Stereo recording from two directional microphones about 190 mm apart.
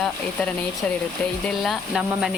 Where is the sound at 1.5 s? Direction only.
Centre (ahead or behind).